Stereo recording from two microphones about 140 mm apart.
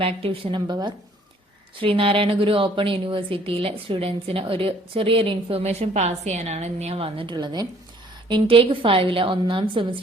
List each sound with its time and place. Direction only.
0.0 s a woman's voice: 40° right (ahead or behind)